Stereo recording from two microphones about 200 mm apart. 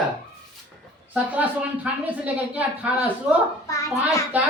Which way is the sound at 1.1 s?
5° right (ahead or behind).